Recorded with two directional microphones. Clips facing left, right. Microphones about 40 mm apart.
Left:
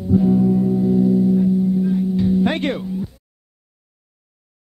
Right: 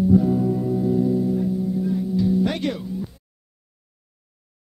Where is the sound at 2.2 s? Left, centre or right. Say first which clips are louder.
Even; left.